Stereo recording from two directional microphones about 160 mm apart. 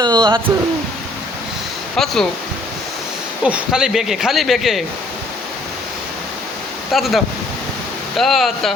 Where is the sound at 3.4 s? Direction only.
5° right (ahead or behind).